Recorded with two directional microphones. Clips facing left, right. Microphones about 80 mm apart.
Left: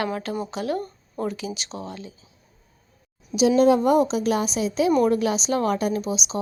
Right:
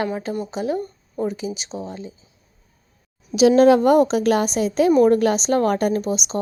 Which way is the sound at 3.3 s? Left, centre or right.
Right.